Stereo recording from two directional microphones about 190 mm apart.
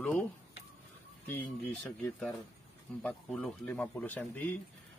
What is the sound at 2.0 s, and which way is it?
Speech, 10° left (ahead or behind).